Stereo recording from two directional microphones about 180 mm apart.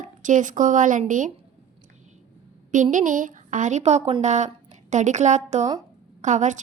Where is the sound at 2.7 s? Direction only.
45° right (ahead or behind).